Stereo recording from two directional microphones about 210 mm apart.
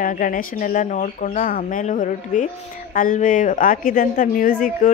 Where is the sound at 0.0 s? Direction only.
40° left (ahead or behind).